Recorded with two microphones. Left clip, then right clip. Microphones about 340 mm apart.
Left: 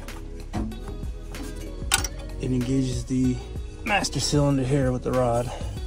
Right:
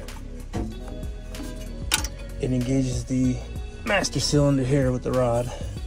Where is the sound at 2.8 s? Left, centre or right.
Centre.